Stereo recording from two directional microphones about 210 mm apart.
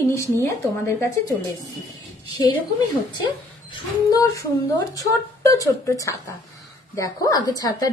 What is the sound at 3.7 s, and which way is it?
A woman's voice, 15° left (ahead or behind).